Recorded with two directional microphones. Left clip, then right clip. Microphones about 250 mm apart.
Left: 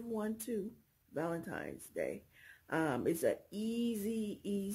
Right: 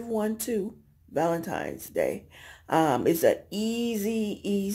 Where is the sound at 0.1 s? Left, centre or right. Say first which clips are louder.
Right 11 dB; centre.